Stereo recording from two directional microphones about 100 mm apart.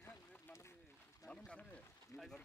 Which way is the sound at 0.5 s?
25° left (ahead or behind).